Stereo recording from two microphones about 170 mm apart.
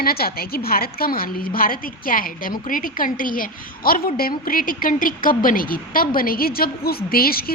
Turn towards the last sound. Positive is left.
turn(degrees=60)  # may be behind; listen again after turning